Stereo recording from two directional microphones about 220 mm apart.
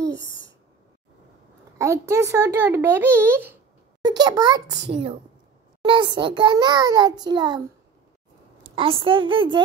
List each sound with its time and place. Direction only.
0.2 s a sound: 60° left (ahead or behind)
1.8 s speech: 15° right (ahead or behind)
5.8 s a child's voice: 20° right (ahead or behind)
8.7 s a child's voice: 25° right (ahead or behind)